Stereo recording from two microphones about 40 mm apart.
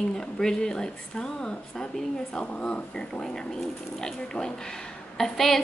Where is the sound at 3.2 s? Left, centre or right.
Centre.